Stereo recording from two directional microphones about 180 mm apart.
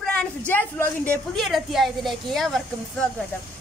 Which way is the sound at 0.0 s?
5° left (ahead or behind).